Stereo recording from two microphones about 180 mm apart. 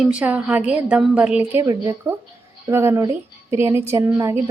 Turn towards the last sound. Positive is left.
turn(degrees=-15)  # may be behind; listen again after turning